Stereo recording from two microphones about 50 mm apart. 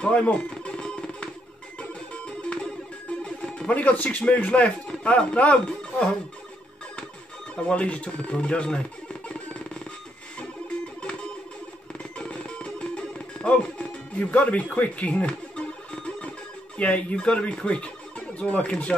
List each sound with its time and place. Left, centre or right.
0.0 s music: left
4.3 s speech: left
7.6 s speech: left
9.3 s music: left
12.2 s music: left
16.7 s speech: left